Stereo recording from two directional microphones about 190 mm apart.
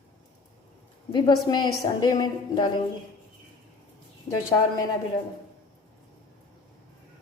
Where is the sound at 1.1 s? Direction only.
25° left (ahead or behind).